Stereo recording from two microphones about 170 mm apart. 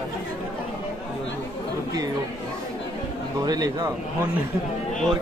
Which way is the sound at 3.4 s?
20° right (ahead or behind).